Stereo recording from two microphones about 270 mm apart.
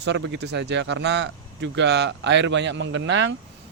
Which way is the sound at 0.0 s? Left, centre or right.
Right.